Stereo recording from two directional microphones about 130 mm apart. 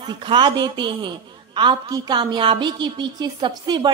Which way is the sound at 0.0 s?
35° right (ahead or behind).